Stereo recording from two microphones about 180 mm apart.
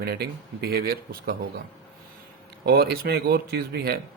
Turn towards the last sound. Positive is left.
turn(degrees=-60)  # may be behind; listen again after turning